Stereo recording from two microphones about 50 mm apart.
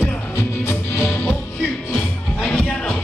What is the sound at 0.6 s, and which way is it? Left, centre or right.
Music, left.